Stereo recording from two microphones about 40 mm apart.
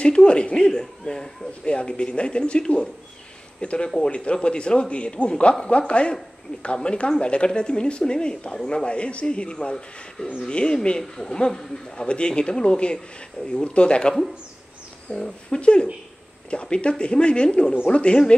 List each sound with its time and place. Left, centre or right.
0.0 s speech: left
15.1 s speech: centre
15.6 s speech: left